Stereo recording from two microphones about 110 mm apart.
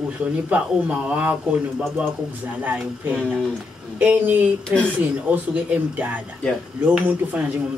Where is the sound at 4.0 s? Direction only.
15° right (ahead or behind).